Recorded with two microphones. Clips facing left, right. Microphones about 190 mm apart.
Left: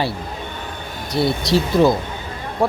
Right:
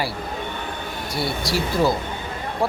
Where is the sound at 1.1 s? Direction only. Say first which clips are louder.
Left 7 dB; 20° left (ahead or behind).